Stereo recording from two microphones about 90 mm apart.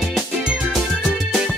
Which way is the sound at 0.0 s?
5° right (ahead or behind).